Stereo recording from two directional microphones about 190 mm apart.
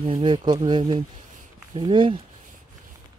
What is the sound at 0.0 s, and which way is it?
Speech, 25° right (ahead or behind).